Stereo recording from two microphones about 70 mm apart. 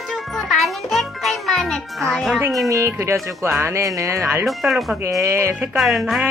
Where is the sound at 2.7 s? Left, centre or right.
Right.